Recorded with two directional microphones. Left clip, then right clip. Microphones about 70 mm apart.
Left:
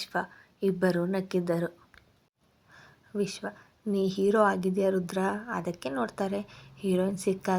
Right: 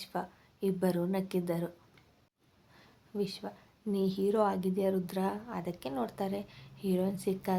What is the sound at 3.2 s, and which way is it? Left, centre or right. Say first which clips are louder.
A woman's voice: left 4 dB; left.